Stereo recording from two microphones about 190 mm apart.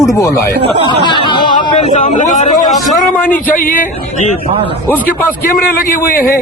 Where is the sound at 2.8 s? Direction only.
10° left (ahead or behind).